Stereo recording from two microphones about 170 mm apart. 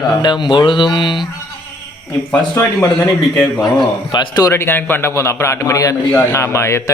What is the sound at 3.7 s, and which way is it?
A man's voice, 25° left (ahead or behind).